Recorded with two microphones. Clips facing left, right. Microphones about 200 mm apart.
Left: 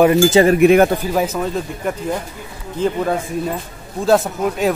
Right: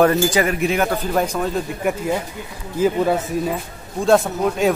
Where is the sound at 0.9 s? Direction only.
5° left (ahead or behind).